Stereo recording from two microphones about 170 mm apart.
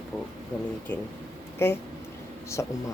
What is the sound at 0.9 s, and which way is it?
Speech, 10° left (ahead or behind).